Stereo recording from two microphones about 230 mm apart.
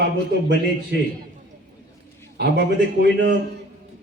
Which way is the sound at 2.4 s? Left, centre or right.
Right.